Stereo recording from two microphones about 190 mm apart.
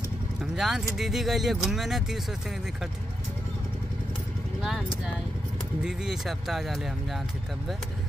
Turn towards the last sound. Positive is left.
turn(degrees=0)  # may be behind; listen again after turning